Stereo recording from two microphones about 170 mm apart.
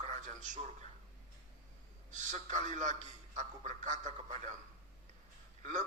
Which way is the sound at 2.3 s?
45° right (ahead or behind).